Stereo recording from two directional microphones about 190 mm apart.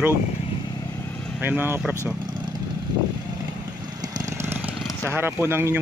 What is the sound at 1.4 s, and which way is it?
Speech, 10° right (ahead or behind).